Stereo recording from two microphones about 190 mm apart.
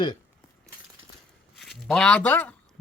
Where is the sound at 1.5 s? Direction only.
Centre (ahead or behind).